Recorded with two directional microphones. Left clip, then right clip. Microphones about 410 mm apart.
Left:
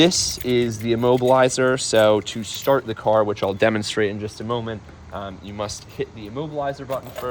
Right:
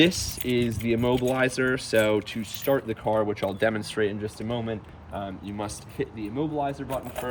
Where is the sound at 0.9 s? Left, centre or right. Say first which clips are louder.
Left 9 dB; centre.